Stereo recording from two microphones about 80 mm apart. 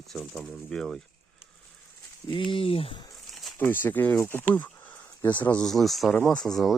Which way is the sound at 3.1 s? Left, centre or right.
Centre.